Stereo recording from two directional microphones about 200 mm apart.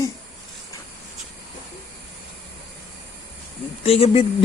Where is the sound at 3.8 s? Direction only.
30° left (ahead or behind).